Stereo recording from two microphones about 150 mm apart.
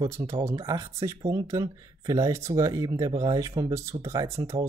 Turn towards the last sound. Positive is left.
turn(degrees=-20)  # may be behind; listen again after turning